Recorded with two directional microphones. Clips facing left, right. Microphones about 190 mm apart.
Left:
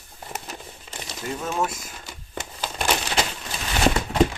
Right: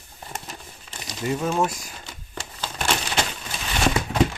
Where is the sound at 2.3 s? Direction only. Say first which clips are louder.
Left 2 dB; 15° left (ahead or behind).